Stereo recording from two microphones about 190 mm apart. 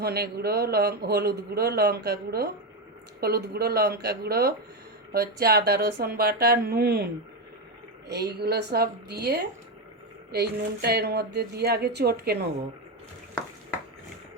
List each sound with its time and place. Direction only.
0.0 s speech: 55° right (ahead or behind)
8.1 s speech: 55° right (ahead or behind)